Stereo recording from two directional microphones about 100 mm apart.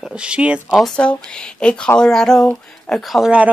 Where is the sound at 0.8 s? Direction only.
10° left (ahead or behind).